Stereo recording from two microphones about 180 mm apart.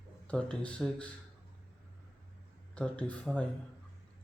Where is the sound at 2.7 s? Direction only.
5° left (ahead or behind).